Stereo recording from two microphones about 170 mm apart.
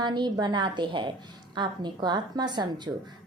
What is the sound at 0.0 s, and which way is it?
A woman's voice, 25° right (ahead or behind).